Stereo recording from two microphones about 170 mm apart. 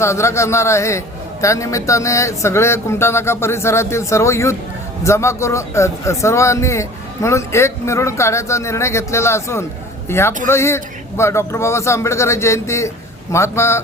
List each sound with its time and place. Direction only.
0.0 s a man's voice: 15° left (ahead or behind)